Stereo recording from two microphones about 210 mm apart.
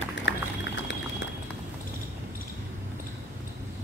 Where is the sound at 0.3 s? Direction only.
60° left (ahead or behind).